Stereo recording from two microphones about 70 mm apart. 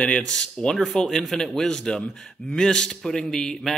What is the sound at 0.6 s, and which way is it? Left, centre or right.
Speech, centre.